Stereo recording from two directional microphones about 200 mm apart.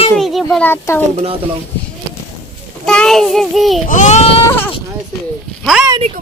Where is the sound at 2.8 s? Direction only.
5° left (ahead or behind).